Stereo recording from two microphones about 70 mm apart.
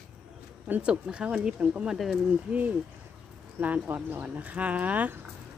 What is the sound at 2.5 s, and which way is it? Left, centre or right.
Speech, right.